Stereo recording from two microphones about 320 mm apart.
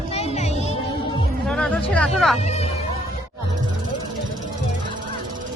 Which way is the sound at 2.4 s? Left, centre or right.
Centre.